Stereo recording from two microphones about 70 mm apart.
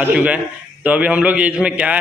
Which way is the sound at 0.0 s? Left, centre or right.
Right.